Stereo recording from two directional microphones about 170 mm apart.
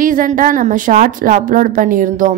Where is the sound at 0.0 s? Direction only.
50° right (ahead or behind).